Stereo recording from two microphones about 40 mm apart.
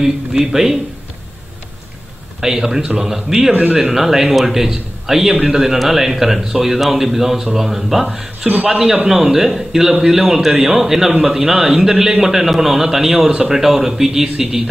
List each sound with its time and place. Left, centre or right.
0.0 s speech: centre
2.4 s speech: centre
5.3 s a man's voice: centre
5.6 s speech: centre